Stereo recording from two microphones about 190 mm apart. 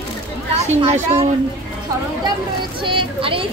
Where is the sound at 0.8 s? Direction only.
35° right (ahead or behind).